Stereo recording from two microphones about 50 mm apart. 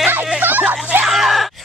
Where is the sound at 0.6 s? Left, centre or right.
Right.